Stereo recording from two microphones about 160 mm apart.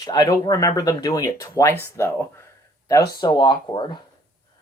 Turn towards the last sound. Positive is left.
turn(degrees=30)  # may be behind; listen again after turning